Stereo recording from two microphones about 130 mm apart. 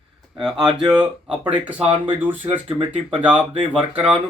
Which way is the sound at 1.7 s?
45° right (ahead or behind).